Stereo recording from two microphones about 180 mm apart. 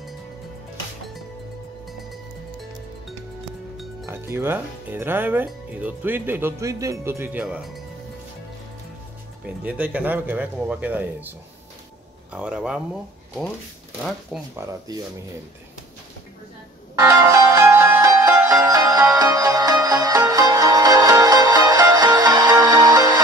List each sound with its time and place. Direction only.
4.0 s speech: 15° right (ahead or behind)
9.6 s speech: 10° right (ahead or behind)
12.3 s speech: 5° right (ahead or behind)
14.3 s speech: centre (ahead or behind)
17.0 s music: 15° right (ahead or behind)